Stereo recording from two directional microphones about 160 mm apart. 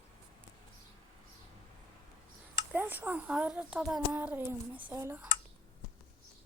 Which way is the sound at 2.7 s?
10° right (ahead or behind).